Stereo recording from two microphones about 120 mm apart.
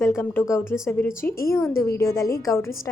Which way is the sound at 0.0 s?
25° left (ahead or behind).